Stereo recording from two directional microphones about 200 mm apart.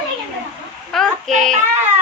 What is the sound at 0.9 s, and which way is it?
Speech, centre (ahead or behind).